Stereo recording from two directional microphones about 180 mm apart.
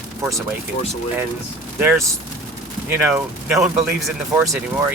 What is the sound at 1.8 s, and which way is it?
Speech, 10° right (ahead or behind).